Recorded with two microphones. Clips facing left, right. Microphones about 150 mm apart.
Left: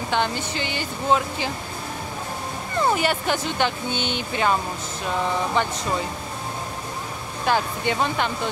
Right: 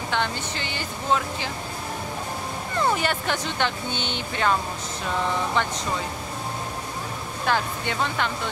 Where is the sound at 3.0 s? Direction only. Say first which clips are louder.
Left 3 dB; 5° left (ahead or behind).